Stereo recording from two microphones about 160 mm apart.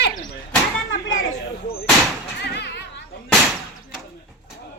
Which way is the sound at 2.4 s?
90° left.